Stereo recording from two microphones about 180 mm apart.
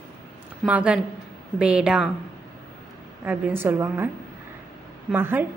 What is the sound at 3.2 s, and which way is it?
Speech, 10° right (ahead or behind).